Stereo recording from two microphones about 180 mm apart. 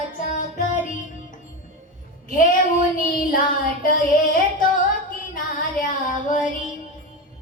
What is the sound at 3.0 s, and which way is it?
Music, 50° left (ahead or behind).